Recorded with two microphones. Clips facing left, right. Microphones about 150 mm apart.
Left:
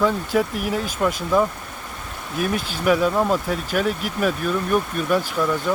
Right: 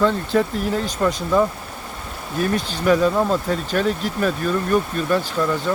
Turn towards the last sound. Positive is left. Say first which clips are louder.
# right 1 dB
turn(degrees=5)  # may be behind; listen again after turning